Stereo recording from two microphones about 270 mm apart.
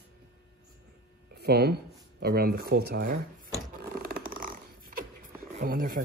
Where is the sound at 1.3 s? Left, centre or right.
Right.